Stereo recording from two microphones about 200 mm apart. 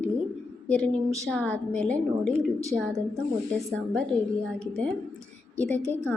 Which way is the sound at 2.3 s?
15° right (ahead or behind).